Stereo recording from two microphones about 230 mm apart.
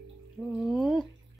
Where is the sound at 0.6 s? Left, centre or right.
Centre.